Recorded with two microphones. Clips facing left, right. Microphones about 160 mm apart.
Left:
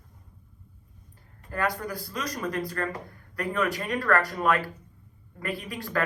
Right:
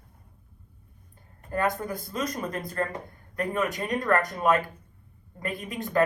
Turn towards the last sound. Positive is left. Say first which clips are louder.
# right 3 dB
turn(degrees=-20)  # may be behind; listen again after turning